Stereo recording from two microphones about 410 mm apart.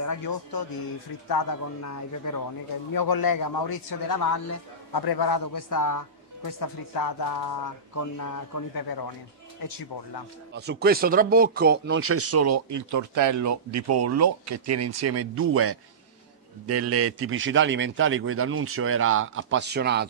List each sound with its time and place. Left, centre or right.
0.0 s a man's voice: left
1.8 s a man's voice: left
2.9 s a man's voice: left
9.6 s a man's voice: left
10.5 s a man's voice: right